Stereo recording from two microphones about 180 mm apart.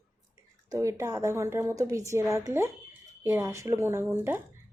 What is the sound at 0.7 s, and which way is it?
A woman's voice, 15° right (ahead or behind).